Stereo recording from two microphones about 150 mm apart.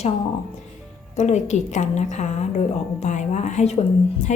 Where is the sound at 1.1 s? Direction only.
50° left (ahead or behind).